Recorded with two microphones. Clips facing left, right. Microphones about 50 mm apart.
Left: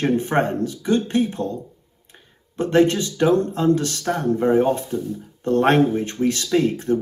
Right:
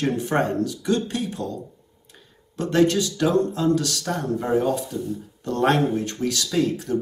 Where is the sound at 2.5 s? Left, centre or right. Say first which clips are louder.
Left 2 dB; left.